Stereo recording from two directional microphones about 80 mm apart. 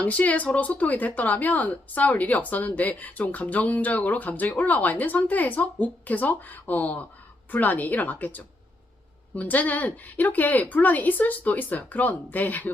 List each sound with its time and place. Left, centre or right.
0.0 s speech: centre